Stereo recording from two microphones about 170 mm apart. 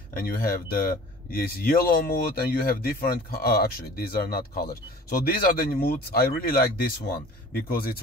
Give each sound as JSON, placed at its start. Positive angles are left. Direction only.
{"t": 0.1, "sound": "speech", "side_deg": 60}